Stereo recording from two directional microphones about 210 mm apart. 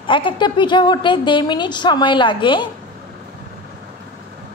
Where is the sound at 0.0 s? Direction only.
25° left (ahead or behind).